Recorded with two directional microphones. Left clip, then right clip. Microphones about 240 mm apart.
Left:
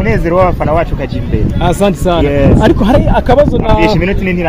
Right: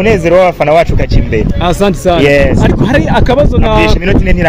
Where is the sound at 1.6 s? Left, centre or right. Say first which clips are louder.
Even; centre; by 4.3 s right.